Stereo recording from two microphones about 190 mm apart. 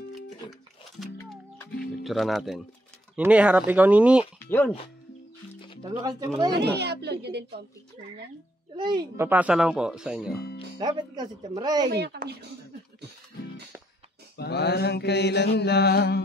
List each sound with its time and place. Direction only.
0.5 s music: centre (ahead or behind)
2.0 s speech: centre (ahead or behind)
4.5 s speech: 10° left (ahead or behind)
5.9 s speech: 20° right (ahead or behind)
6.6 s a woman's voice: 60° right (ahead or behind)
8.7 s speech: 25° right (ahead or behind); by 10.3 s 5° right (ahead or behind)
10.8 s speech: 20° right (ahead or behind)
11.9 s speech: 55° right (ahead or behind)
14.3 s mantra: 60° left (ahead or behind)